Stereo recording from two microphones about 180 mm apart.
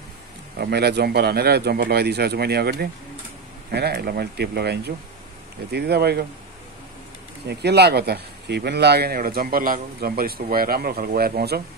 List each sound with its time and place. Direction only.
0.6 s speech: 65° right (ahead or behind)
7.4 s speech: 65° right (ahead or behind)